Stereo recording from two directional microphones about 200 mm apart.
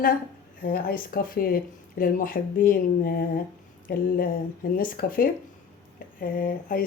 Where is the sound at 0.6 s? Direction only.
45° left (ahead or behind).